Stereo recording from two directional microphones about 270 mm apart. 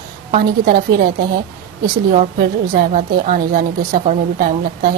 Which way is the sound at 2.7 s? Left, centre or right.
Right.